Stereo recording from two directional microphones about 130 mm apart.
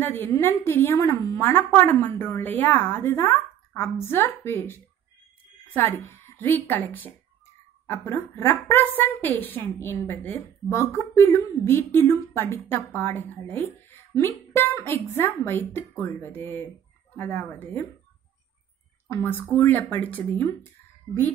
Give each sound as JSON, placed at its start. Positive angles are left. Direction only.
{"t": 0.0, "sound": "a woman's voice", "side_deg": 15}
{"t": 19.5, "sound": "a woman's voice", "side_deg": 15}